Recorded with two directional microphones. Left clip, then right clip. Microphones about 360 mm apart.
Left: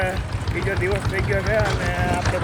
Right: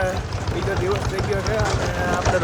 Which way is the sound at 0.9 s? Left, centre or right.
Centre.